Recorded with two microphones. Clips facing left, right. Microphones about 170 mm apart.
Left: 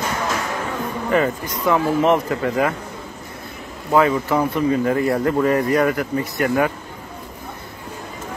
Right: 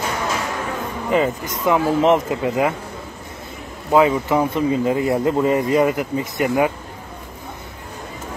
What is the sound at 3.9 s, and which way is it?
Speech, 15° right (ahead or behind).